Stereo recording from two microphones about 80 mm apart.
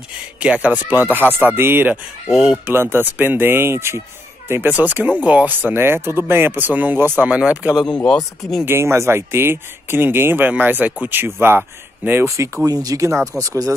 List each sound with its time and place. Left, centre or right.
0.4 s speech: centre
2.2 s speech: centre
2.7 s speech: right
7.2 s speech: centre
8.0 s speech: centre
8.6 s speech: right
12.6 s speech: right